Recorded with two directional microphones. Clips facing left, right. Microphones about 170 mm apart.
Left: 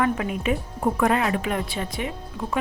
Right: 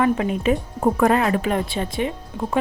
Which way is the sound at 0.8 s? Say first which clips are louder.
Right 3 dB; 40° right (ahead or behind).